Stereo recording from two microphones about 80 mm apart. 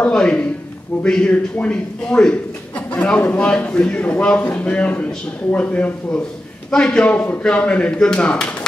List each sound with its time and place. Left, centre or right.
0.1 s a man's voice: centre